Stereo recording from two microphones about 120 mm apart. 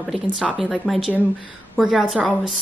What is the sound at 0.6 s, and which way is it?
Speech, centre (ahead or behind).